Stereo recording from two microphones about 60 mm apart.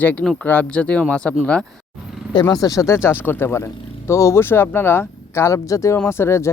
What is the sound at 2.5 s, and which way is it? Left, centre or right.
Speech, left.